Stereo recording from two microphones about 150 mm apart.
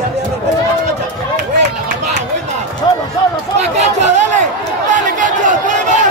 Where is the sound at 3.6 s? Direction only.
50° right (ahead or behind).